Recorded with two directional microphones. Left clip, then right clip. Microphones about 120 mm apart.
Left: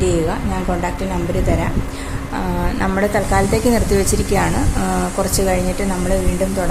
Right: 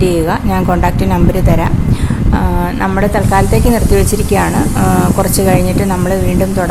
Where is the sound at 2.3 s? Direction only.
20° right (ahead or behind).